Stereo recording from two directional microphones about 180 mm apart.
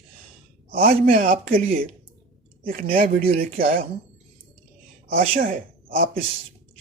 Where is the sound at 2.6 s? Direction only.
55° right (ahead or behind).